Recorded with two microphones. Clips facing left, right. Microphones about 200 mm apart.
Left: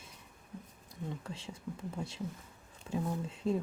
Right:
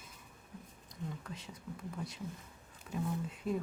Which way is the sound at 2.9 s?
25° left (ahead or behind).